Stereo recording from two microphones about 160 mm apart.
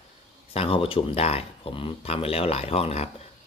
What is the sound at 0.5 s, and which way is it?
Speech, 35° left (ahead or behind).